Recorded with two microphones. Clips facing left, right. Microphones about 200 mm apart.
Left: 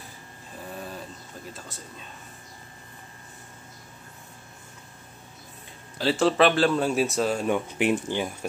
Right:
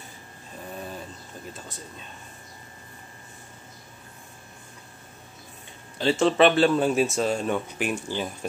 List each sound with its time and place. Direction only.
5.9 s speech: 5° left (ahead or behind)